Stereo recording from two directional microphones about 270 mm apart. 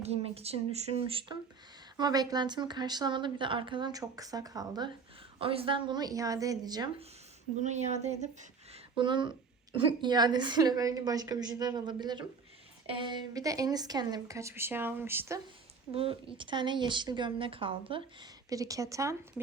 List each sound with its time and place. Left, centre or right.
0.0 s speech: right
7.6 s speech: right; by 15.4 s centre
15.9 s speech: right